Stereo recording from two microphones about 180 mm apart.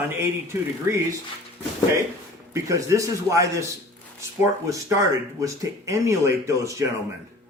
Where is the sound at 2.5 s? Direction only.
15° right (ahead or behind).